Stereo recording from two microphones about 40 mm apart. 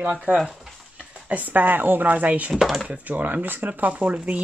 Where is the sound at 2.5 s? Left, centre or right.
Centre.